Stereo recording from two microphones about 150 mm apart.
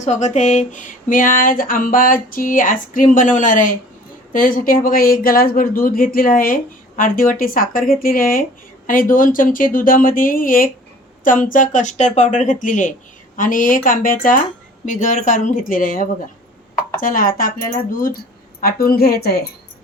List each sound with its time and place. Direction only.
0.0 s speech: 50° left (ahead or behind); by 17.5 s 70° left (ahead or behind)
18.6 s a woman's voice: 85° left